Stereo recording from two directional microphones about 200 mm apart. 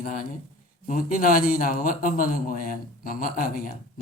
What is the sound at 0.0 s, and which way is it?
A man's voice, 45° left (ahead or behind).